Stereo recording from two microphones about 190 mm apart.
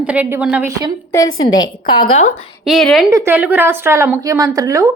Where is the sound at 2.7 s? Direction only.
Centre (ahead or behind).